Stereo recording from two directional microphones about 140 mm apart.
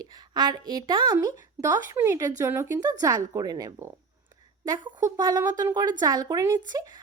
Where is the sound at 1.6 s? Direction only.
20° right (ahead or behind).